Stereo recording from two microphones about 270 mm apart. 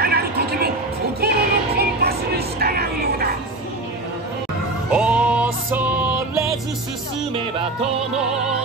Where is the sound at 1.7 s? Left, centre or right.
Right.